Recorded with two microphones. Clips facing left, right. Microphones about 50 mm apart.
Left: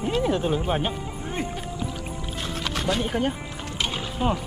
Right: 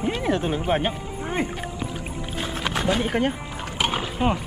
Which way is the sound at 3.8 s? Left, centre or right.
Right.